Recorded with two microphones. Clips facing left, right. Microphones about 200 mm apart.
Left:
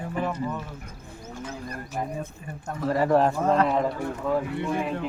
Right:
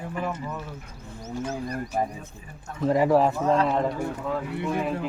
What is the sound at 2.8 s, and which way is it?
Speech, 15° right (ahead or behind).